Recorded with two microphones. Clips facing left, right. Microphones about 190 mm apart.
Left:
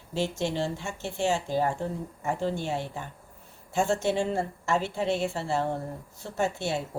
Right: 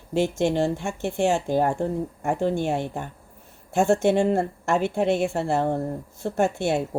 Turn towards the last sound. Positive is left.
turn(degrees=-55)  # may be behind; listen again after turning